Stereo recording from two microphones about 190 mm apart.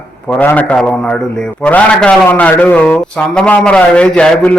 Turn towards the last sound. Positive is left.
turn(degrees=5)  # may be behind; listen again after turning